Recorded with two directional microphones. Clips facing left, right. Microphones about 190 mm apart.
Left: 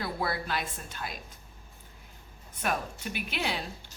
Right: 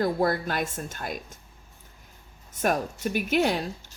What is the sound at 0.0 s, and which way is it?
A woman's voice, 45° right (ahead or behind).